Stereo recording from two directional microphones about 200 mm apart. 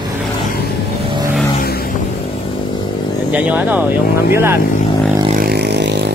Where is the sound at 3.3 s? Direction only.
5° right (ahead or behind).